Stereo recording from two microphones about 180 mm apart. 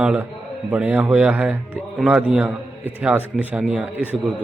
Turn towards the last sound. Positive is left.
turn(degrees=-10)  # may be behind; listen again after turning